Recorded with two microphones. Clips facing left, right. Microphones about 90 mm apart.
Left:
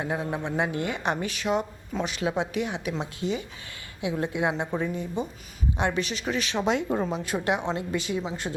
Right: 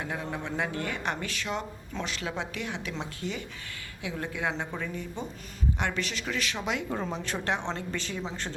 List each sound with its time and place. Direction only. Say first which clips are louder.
0.0 s speech: left 5 dB; 25° left (ahead or behind)
6.9 s a woman's voice: left 5 dB; 10° left (ahead or behind)